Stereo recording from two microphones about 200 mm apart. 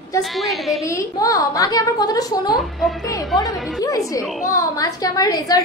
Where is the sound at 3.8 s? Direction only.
15° left (ahead or behind).